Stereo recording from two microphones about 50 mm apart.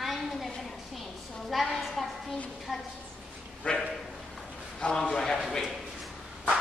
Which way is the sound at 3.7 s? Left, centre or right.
Left.